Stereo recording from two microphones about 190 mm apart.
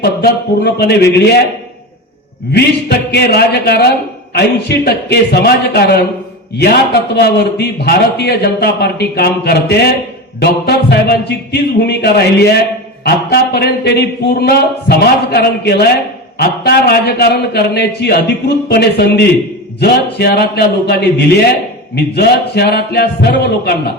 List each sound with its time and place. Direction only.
0.0 s a man's voice: 60° left (ahead or behind)
2.5 s a man's voice: 60° left (ahead or behind)